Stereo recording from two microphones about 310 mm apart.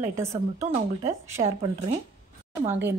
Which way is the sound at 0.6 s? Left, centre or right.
Centre.